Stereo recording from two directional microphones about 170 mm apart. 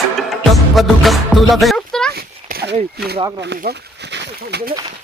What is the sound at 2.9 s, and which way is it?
Speech, 70° right (ahead or behind).